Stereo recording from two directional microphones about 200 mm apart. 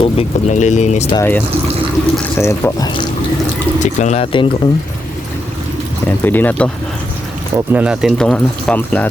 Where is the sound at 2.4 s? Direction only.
15° left (ahead or behind).